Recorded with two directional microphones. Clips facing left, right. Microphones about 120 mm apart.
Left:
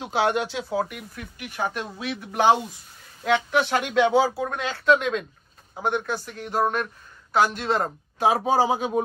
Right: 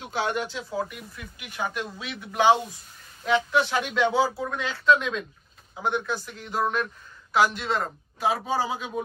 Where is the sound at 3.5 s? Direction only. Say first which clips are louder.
Left 3 dB; 60° left (ahead or behind).